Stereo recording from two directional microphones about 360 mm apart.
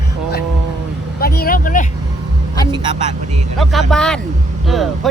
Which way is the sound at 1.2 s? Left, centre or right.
Left.